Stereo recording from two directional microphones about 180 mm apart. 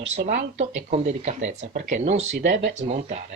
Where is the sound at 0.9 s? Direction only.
35° right (ahead or behind).